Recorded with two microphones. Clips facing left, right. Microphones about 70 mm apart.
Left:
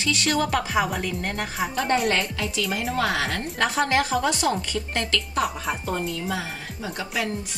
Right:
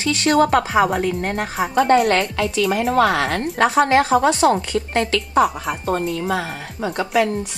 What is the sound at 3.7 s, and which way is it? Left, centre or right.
Speech, right.